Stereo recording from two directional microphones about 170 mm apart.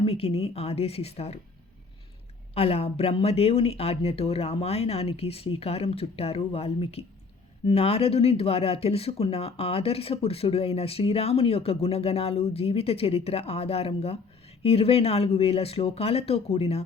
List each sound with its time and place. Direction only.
0.0 s speech: 35° left (ahead or behind)
2.6 s speech: 35° left (ahead or behind)